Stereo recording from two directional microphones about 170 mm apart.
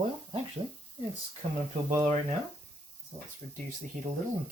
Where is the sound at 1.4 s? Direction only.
35° right (ahead or behind).